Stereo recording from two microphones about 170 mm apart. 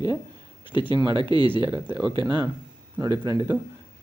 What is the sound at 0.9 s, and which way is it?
Speech, 30° right (ahead or behind).